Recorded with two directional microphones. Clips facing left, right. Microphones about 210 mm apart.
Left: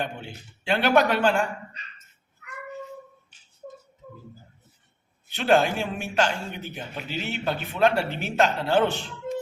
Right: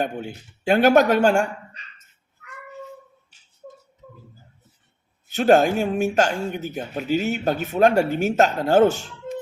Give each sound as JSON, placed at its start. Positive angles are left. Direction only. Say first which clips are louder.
{"t": 0.0, "sound": "speech", "louder": "right 6 dB", "side_deg": -45}
{"t": 5.3, "sound": "speech", "louder": "right 5 dB", "side_deg": -45}